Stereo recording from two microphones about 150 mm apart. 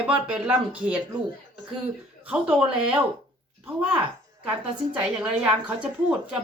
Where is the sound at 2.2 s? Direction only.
5° right (ahead or behind).